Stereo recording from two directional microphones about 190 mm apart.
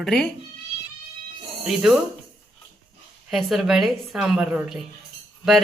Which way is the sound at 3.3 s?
Centre (ahead or behind).